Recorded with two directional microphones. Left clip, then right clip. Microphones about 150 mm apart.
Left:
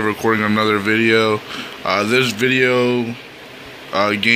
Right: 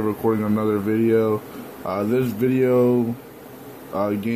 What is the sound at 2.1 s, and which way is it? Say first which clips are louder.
Speech: left 4 dB; 5° right (ahead or behind).